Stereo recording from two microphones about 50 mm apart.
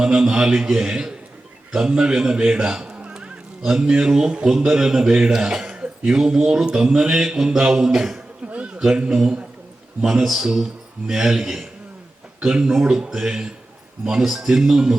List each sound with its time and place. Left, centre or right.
0.0 s a man's voice: centre
5.8 s a sound: right
6.1 s speech: centre
6.7 s mantra: centre
6.9 s speech: centre
8.4 s a sound: right
8.8 s speech: centre